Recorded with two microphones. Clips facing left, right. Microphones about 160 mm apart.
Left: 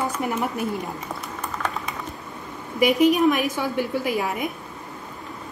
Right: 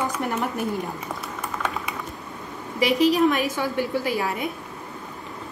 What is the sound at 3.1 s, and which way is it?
A woman's voice, 15° left (ahead or behind).